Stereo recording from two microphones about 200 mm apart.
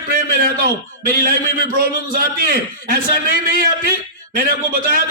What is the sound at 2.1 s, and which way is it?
A man's voice, 45° right (ahead or behind).